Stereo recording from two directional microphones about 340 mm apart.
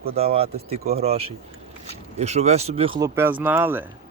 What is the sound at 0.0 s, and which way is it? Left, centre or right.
Speech, centre.